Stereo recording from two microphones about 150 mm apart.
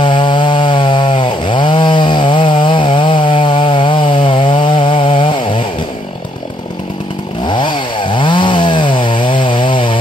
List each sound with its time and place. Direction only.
0.0 s chainsaw: 30° left (ahead or behind)
7.4 s chainsaw: 30° left (ahead or behind)